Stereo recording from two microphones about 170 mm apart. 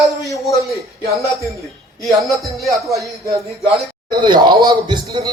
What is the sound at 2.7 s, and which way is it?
A man's voice, 20° right (ahead or behind).